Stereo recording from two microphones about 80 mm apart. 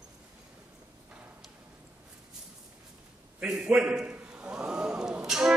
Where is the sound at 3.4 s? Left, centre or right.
Centre.